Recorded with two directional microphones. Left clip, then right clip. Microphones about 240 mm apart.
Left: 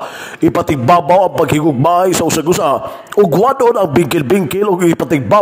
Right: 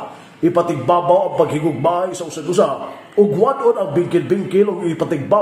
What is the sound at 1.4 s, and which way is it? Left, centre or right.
Speech, left.